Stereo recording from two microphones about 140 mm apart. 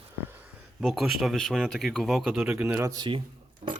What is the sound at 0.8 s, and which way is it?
Speech, centre (ahead or behind).